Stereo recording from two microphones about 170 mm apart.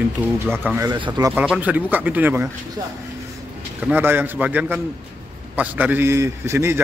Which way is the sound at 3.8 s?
10° right (ahead or behind).